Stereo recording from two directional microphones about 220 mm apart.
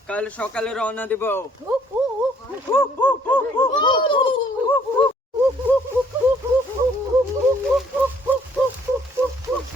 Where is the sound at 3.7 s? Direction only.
20° left (ahead or behind).